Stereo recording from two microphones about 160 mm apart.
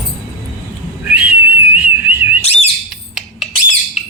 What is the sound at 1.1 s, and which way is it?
Whistle, 10° right (ahead or behind).